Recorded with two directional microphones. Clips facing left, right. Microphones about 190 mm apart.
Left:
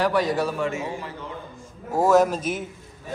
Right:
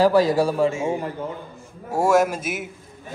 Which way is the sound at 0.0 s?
35° right (ahead or behind).